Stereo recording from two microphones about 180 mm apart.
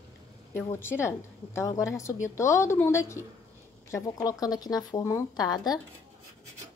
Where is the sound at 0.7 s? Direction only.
15° left (ahead or behind).